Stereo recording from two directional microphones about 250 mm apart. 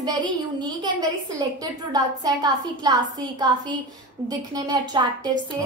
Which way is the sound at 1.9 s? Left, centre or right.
Centre.